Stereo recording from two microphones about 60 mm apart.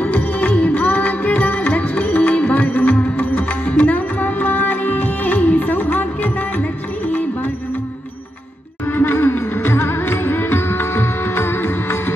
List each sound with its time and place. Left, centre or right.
0.0 s music: left
8.9 s music: left